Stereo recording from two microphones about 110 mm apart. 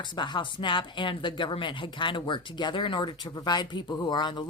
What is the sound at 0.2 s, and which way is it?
Speech, 45° left (ahead or behind).